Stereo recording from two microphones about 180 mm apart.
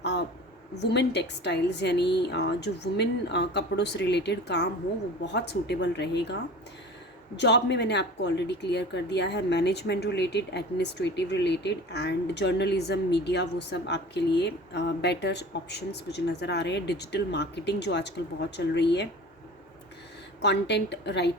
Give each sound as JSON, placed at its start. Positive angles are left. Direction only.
{"t": 0.0, "sound": "a sound", "side_deg": 70}
{"t": 0.8, "sound": "speech", "side_deg": 70}
{"t": 7.3, "sound": "speech", "side_deg": 75}
{"t": 20.4, "sound": "speech", "side_deg": 70}